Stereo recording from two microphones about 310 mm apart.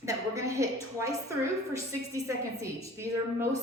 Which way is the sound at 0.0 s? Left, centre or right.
Centre.